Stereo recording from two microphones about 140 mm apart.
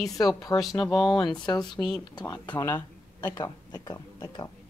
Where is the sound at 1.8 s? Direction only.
20° left (ahead or behind).